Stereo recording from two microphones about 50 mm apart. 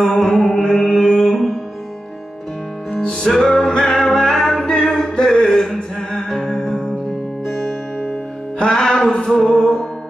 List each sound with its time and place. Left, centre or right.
0.0 s mantra: centre
2.9 s music: centre
8.6 s music: centre
9.1 s a capella: centre